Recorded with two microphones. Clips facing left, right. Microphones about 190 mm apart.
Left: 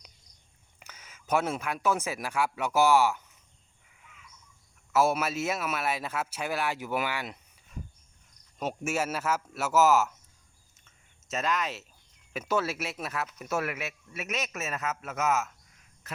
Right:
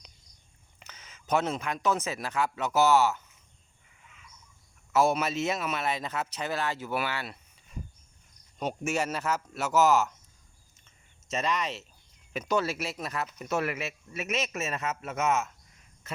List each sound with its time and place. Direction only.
0.8 s speech: 10° left (ahead or behind)
4.9 s speech: 5° left (ahead or behind)
8.5 s speech: 5° left (ahead or behind)
10.8 s a sound: centre (ahead or behind)
12.3 s speech: 5° left (ahead or behind)
16.1 s a sound: centre (ahead or behind)